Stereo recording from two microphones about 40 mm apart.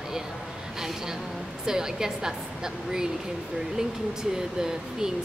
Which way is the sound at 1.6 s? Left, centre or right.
Centre.